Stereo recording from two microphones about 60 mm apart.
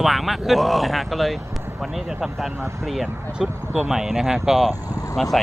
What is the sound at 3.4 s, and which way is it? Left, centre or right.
Speech, centre.